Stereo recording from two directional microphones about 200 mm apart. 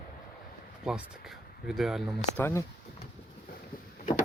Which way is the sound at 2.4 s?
10° left (ahead or behind).